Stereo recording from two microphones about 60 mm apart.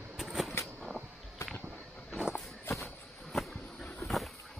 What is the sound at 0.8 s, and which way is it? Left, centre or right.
Vehicle, centre.